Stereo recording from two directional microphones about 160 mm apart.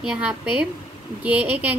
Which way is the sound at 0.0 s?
5° right (ahead or behind).